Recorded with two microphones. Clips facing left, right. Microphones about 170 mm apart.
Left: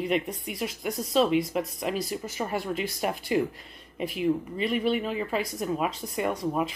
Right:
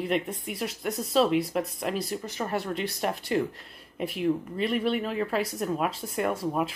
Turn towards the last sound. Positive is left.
turn(degrees=-5)  # may be behind; listen again after turning